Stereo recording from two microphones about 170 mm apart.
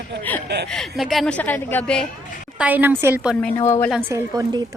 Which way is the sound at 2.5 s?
10° right (ahead or behind).